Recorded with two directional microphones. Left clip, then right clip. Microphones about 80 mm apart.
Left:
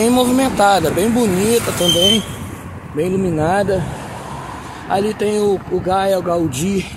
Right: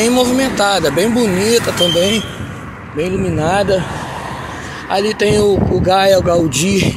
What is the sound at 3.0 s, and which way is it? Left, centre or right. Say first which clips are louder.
Speech: even; left.